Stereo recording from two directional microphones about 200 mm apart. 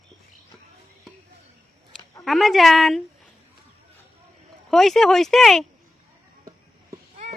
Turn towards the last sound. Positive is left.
turn(degrees=0)  # may be behind; listen again after turning